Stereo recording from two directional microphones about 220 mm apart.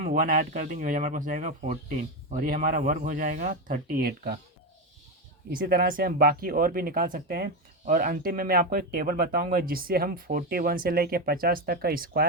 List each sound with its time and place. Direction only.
0.0 s speech: 40° right (ahead or behind)
5.5 s speech: 40° right (ahead or behind)